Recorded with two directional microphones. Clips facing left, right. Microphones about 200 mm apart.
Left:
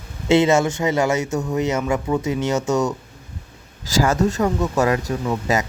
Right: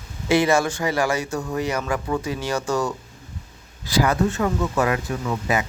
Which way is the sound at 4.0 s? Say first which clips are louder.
Left 2 dB; 45° left (ahead or behind).